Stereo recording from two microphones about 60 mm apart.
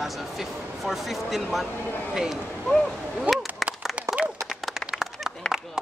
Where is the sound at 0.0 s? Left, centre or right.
Centre.